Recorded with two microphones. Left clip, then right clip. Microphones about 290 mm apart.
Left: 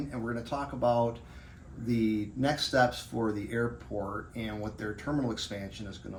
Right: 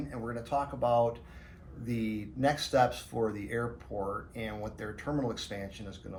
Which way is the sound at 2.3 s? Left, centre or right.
Centre.